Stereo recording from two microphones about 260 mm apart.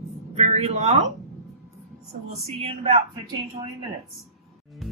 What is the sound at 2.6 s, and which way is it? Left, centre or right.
Speech, right.